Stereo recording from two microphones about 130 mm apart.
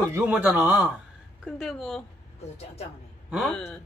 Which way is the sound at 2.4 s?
55° left (ahead or behind).